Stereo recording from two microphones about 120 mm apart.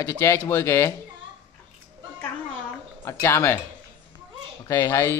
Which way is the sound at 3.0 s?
20° left (ahead or behind).